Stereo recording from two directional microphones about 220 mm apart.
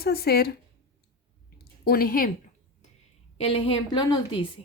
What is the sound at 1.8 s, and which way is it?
Speech, 45° left (ahead or behind).